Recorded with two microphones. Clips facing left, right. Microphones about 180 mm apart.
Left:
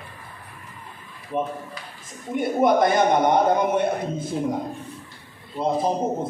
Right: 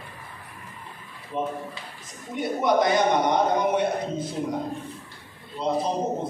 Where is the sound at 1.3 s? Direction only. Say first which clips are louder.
Left 2 dB; 55° left (ahead or behind).